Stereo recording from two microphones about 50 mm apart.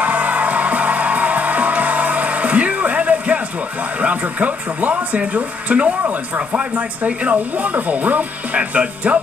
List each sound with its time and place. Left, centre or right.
0.0 s music: right
4.0 s speech: right